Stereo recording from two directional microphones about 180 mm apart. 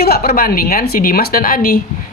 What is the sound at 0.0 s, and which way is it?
A woman's voice, 60° left (ahead or behind).